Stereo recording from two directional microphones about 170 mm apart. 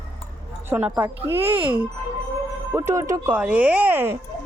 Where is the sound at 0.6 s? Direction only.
10° right (ahead or behind).